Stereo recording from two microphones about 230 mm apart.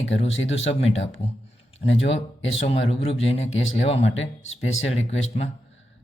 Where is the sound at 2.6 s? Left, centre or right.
Left.